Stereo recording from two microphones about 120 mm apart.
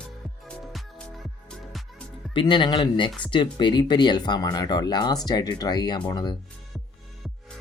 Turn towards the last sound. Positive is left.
turn(degrees=35)  # may be behind; listen again after turning